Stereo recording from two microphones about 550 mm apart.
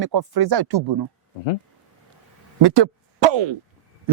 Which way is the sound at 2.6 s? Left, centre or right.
Right.